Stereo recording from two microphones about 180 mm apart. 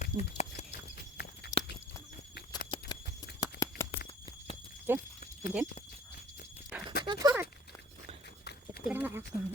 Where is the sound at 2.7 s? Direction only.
25° left (ahead or behind).